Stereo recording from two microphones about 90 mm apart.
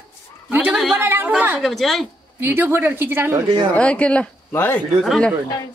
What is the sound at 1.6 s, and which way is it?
Speech, centre (ahead or behind).